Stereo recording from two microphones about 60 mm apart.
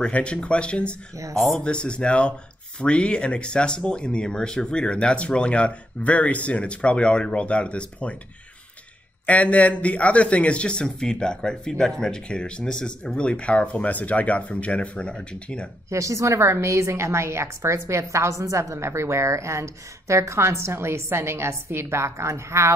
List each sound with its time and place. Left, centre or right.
0.0 s speech: centre
1.3 s speech: centre
1.6 s speech: centre
9.2 s speech: left
15.9 s a woman's voice: right